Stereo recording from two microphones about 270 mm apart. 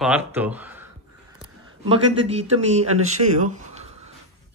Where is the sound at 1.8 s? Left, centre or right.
Right.